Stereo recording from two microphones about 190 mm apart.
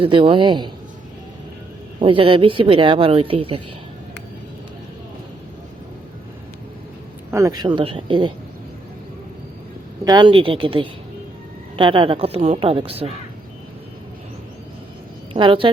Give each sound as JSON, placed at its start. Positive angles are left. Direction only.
{"t": 0.0, "sound": "speech", "side_deg": -25}
{"t": 2.0, "sound": "speech", "side_deg": -25}
{"t": 7.3, "sound": "speech", "side_deg": -15}
{"t": 10.0, "sound": "speech", "side_deg": -20}
{"t": 15.3, "sound": "a woman's voice", "side_deg": -25}